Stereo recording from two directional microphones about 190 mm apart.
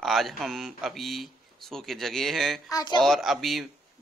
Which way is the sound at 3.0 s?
Centre (ahead or behind).